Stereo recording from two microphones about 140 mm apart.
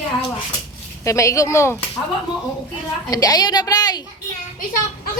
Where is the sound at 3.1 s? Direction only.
25° left (ahead or behind).